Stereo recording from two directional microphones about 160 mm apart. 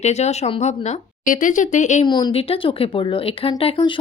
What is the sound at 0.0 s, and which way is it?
Speech, 45° left (ahead or behind).